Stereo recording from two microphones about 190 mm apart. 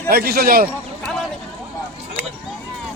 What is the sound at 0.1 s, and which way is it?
Speech, 55° right (ahead or behind).